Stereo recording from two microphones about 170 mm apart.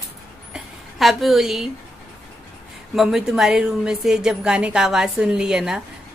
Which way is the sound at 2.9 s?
5° right (ahead or behind).